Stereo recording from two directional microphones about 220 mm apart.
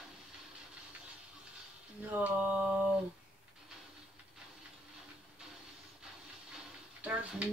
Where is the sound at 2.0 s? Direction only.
5° right (ahead or behind).